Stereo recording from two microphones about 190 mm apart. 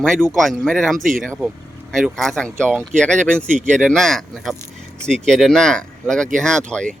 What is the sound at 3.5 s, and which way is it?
Speech, 40° right (ahead or behind).